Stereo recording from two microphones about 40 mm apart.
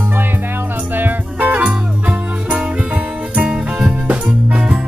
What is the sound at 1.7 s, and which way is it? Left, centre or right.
Music, right.